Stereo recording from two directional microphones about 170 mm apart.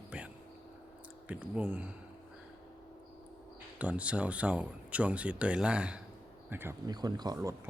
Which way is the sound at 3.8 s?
5° right (ahead or behind).